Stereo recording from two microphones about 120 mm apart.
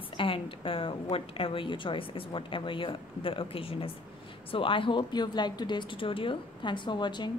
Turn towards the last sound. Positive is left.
turn(degrees=40)  # may be behind; listen again after turning